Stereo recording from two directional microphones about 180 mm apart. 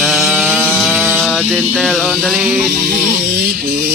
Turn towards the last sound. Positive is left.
turn(degrees=-50)  # may be behind; listen again after turning